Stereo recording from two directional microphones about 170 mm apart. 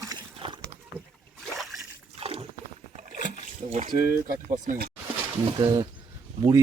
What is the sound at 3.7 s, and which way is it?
Speech, 45° right (ahead or behind).